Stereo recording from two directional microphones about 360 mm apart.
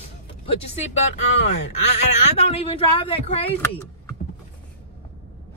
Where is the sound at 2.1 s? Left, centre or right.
Centre.